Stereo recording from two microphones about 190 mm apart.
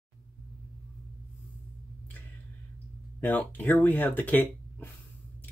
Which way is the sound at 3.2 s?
10° left (ahead or behind).